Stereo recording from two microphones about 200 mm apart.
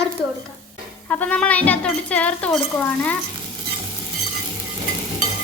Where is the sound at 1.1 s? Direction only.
10° left (ahead or behind).